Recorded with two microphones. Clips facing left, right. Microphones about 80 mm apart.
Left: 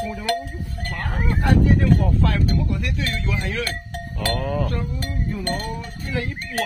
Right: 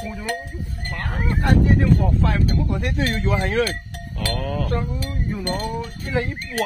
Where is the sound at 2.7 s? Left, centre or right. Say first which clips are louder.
Right 4 dB; right.